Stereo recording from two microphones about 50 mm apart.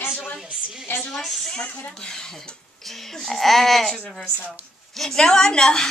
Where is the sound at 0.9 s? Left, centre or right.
Left.